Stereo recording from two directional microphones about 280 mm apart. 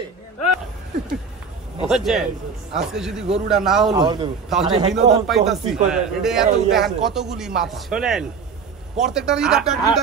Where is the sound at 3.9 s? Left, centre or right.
Centre.